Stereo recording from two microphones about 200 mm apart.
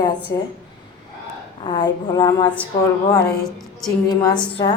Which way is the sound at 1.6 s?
25° left (ahead or behind).